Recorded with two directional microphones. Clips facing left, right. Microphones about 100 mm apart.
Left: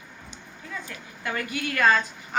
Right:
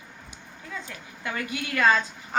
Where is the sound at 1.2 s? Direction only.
20° right (ahead or behind).